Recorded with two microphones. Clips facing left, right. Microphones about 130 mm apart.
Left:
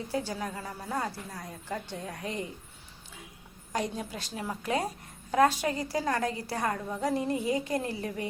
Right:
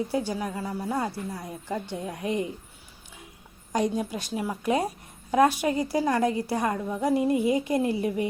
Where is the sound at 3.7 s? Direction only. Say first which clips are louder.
Right 7 dB; 15° right (ahead or behind).